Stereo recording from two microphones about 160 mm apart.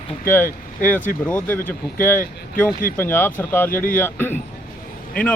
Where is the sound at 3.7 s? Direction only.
60° left (ahead or behind).